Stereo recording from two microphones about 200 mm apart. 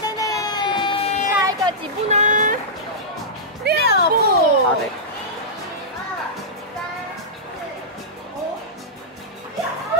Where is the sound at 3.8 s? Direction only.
50° left (ahead or behind).